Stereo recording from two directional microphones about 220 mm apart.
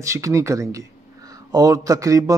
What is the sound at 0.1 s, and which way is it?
Speech, 15° right (ahead or behind).